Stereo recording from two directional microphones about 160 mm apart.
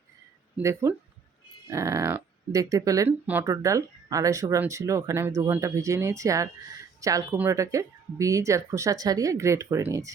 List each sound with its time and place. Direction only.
0.5 s speech: 15° right (ahead or behind)
3.1 s speech: 10° right (ahead or behind)